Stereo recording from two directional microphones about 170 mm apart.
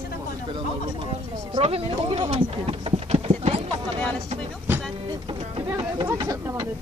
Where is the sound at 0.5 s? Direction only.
30° right (ahead or behind).